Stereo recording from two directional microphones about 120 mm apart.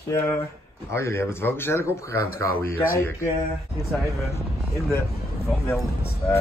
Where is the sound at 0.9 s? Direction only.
20° left (ahead or behind).